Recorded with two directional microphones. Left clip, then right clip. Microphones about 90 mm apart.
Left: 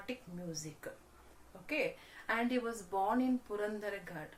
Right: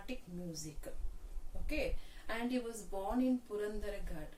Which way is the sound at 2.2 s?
30° left (ahead or behind).